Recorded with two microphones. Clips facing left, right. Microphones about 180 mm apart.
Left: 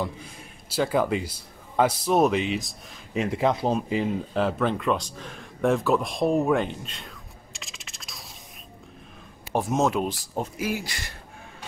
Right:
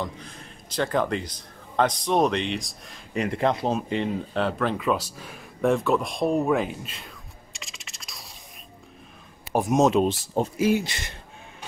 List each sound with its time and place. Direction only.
0.0 s speech: 10° left (ahead or behind)
7.5 s scratch: centre (ahead or behind)
9.5 s speech: 15° right (ahead or behind)